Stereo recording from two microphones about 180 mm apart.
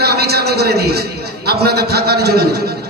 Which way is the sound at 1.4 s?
60° right (ahead or behind).